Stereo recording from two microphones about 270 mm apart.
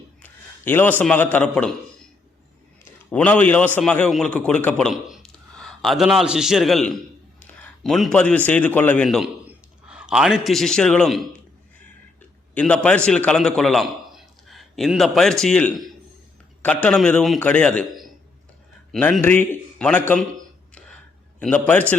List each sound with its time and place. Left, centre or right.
0.2 s a man's voice: centre
3.1 s a man's voice: centre
12.5 s a man's voice: centre
21.3 s a man's voice: centre